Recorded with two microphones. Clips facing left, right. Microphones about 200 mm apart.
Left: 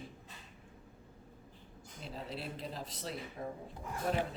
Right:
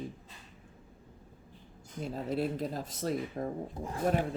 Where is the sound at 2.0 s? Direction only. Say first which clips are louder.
Right 10 dB; 45° right (ahead or behind).